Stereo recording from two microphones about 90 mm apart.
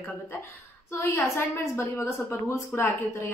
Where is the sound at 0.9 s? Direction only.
25° left (ahead or behind).